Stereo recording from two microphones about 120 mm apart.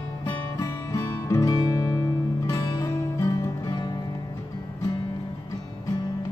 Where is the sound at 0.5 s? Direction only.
25° left (ahead or behind).